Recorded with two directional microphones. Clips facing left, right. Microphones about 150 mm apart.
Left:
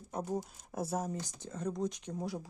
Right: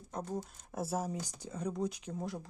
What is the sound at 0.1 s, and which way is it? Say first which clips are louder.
Speech: left 3 dB; 10° left (ahead or behind).